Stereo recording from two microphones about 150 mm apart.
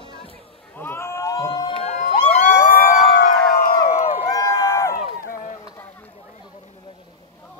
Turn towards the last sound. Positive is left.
turn(degrees=60)  # may be behind; listen again after turning